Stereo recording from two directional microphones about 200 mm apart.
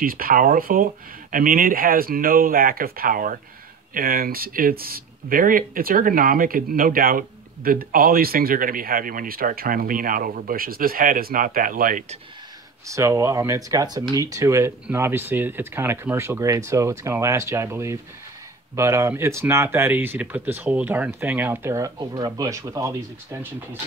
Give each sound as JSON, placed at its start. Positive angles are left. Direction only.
{"t": 0.0, "sound": "speech", "side_deg": -45}
{"t": 12.8, "sound": "speech", "side_deg": -15}